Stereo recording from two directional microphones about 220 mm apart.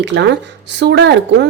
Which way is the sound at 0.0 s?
50° right (ahead or behind).